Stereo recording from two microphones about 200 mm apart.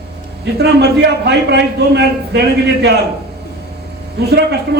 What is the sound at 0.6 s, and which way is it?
A man's voice, 55° right (ahead or behind).